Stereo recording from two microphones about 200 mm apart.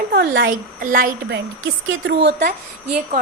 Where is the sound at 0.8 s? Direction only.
45° right (ahead or behind).